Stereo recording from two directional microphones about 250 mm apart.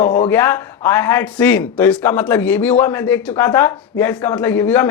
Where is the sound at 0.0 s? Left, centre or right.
Left.